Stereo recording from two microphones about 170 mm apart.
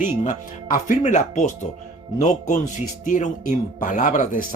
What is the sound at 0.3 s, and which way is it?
A man's voice, 50° left (ahead or behind).